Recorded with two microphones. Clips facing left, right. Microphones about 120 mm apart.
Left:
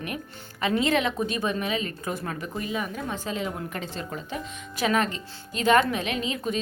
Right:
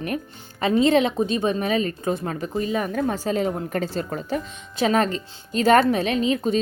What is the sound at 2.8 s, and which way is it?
A woman's voice, 45° right (ahead or behind).